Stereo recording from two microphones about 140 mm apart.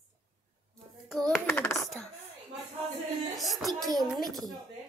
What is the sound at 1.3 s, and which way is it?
Hands, 15° left (ahead or behind).